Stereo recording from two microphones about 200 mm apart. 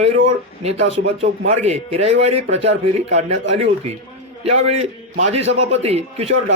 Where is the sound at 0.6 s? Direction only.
30° right (ahead or behind).